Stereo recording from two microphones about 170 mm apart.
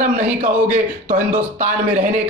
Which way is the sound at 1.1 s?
50° right (ahead or behind).